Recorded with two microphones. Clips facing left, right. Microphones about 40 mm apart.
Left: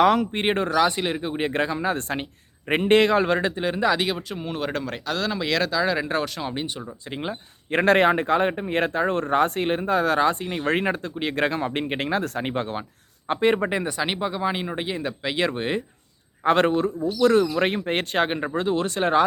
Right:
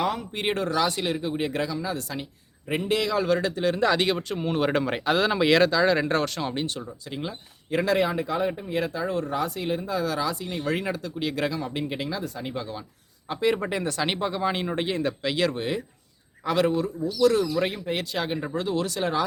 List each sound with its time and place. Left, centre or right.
0.0 s speech: left
0.3 s speech: left
3.8 s speech: centre
7.1 s speech: left
7.8 s speech: left
13.7 s speech: centre
16.4 s speech: left